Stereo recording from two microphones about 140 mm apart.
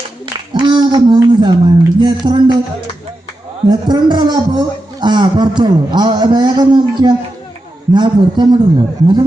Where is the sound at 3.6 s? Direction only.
30° right (ahead or behind).